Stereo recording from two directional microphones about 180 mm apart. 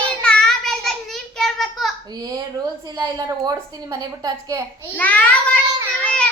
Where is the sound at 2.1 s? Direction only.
20° right (ahead or behind).